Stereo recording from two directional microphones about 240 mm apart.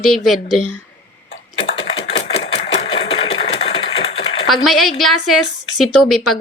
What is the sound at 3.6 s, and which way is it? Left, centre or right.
Typewriter, left.